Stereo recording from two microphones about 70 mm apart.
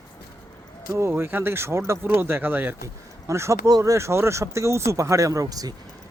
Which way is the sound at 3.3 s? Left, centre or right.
Right.